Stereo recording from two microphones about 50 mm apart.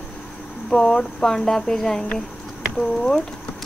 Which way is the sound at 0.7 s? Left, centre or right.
Centre.